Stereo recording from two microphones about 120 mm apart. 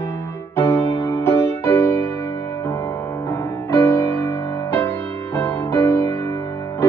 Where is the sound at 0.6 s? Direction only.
20° left (ahead or behind).